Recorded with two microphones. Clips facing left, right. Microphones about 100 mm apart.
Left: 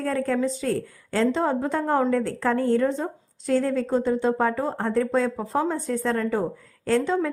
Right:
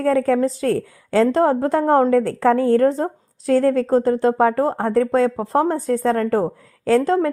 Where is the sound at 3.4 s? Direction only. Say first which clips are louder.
Right 6 dB; 90° right.